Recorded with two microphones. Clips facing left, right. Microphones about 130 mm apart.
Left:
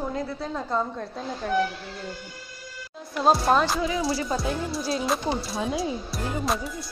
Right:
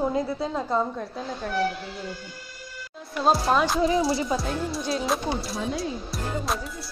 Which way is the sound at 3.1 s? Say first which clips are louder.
Left 1 dB; centre (ahead or behind).